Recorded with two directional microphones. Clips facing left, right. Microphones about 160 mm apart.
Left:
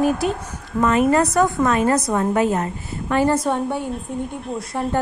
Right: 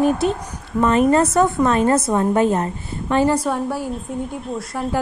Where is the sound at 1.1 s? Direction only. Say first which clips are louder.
Right 1 dB; 25° right (ahead or behind).